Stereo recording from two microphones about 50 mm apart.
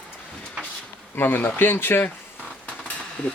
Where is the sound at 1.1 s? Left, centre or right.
Left.